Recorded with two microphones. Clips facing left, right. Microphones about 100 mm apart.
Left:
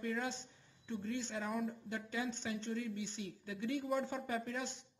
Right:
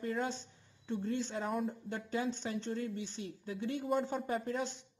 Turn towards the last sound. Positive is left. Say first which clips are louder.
# right 4 dB
turn(degrees=-35)  # may be behind; listen again after turning